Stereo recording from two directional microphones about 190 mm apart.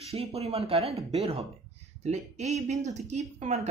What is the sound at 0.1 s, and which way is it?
Speech, 30° right (ahead or behind).